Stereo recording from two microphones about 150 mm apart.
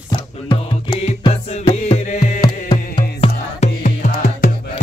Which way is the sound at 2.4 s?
30° left (ahead or behind).